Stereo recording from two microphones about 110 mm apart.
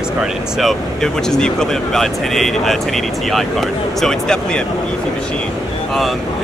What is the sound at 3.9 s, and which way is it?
Speech, 5° left (ahead or behind).